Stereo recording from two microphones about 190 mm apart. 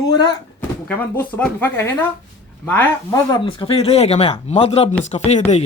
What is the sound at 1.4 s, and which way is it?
A man's voice, 10° left (ahead or behind).